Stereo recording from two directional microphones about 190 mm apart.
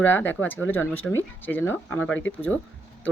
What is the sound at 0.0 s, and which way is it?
Speech, 10° left (ahead or behind).